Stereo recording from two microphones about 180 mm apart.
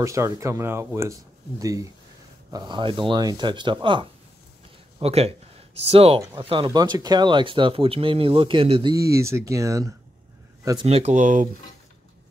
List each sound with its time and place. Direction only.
0.0 s speech: 15° right (ahead or behind)
8.9 s speech: 15° right (ahead or behind)
10.9 s speech: 35° right (ahead or behind)